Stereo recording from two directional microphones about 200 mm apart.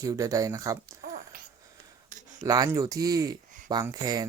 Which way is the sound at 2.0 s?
40° right (ahead or behind).